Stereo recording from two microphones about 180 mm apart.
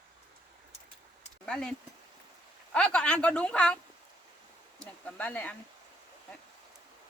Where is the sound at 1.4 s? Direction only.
5° left (ahead or behind).